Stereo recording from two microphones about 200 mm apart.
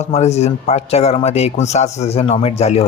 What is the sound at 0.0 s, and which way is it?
A man's voice, 35° left (ahead or behind).